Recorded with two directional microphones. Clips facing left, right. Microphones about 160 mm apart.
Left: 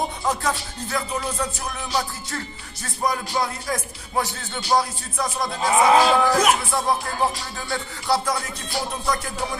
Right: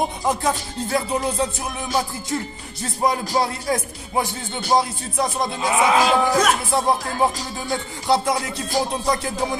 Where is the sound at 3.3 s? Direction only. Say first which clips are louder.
Right 4 dB; 30° right (ahead or behind).